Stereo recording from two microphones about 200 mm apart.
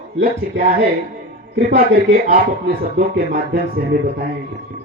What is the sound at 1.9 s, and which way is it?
Speech, 50° right (ahead or behind).